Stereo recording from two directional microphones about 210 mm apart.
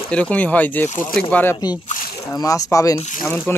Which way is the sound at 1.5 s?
20° left (ahead or behind).